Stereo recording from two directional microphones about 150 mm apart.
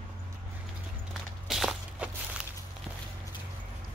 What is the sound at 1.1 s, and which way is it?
Walk, centre (ahead or behind).